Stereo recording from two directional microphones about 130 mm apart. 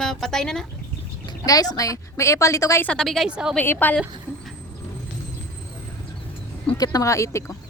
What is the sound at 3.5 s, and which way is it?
Speech, 15° left (ahead or behind).